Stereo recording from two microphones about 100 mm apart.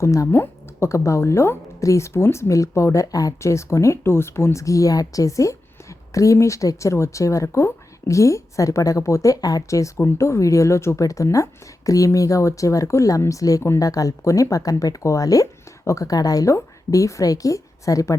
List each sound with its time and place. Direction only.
0.0 s a woman's voice: 30° left (ahead or behind)